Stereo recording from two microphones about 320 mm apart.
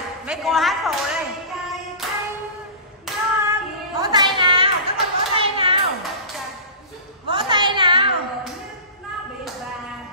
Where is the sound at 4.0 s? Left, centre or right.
Centre.